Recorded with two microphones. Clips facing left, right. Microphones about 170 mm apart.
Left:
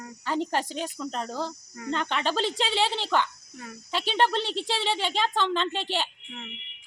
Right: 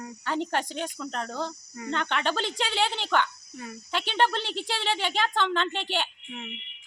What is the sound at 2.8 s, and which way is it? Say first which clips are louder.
Speech: left 2 dB; 30° left (ahead or behind).